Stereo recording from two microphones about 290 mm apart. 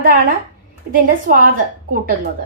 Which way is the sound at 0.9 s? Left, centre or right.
Right.